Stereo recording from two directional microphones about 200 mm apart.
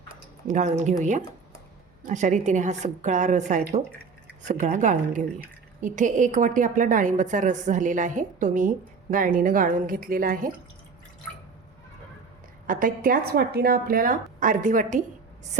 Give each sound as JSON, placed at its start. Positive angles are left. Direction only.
{"t": 0.4, "sound": "a woman's voice", "side_deg": -35}
{"t": 12.6, "sound": "speech", "side_deg": -40}